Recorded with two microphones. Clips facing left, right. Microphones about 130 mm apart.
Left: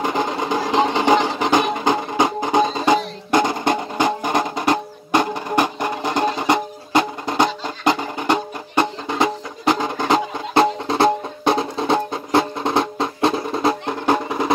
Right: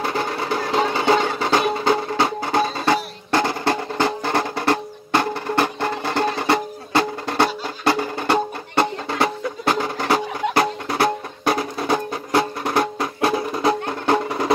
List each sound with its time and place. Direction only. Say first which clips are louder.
0.0 s music: left 2 dB; 15° left (ahead or behind)